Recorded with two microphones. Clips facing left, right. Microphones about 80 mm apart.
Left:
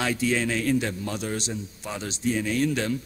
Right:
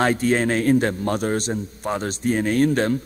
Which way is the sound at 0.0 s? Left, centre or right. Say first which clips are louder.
Right 6 dB; right.